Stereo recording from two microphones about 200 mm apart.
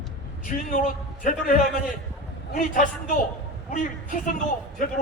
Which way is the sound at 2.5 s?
40° left (ahead or behind).